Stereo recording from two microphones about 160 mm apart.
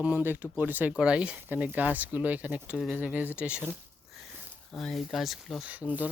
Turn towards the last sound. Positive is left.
turn(degrees=-10)  # may be behind; listen again after turning